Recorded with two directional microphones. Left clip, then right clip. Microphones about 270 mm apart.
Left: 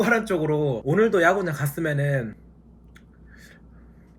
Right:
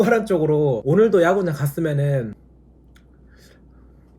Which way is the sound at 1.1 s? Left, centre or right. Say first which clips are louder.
Right 3 dB; right.